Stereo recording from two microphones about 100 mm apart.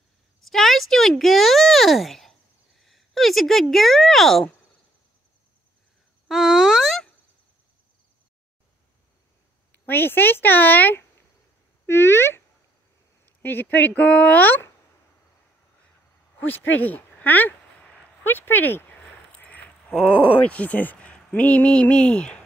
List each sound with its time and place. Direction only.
0.5 s speech: centre (ahead or behind)
2.8 s a sound: centre (ahead or behind)
3.7 s speech: centre (ahead or behind)
6.2 s a sound: 5° right (ahead or behind)
9.7 s speech: 20° left (ahead or behind)
16.3 s speech: 15° left (ahead or behind)